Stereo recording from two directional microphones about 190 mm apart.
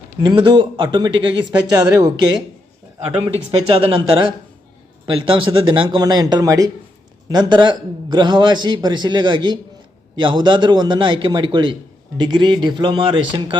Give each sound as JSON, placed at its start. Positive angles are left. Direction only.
{"t": 0.2, "sound": "a man's voice", "side_deg": -25}
{"t": 3.7, "sound": "a man's voice", "side_deg": -30}